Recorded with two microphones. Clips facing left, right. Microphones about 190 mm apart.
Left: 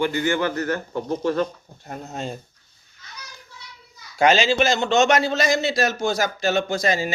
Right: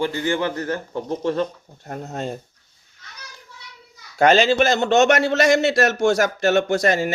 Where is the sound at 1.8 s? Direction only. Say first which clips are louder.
Right 3 dB; 50° right (ahead or behind).